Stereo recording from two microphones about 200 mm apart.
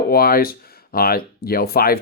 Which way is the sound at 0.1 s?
50° left (ahead or behind).